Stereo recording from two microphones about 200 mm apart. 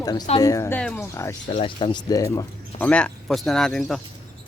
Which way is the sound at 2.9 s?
5° left (ahead or behind).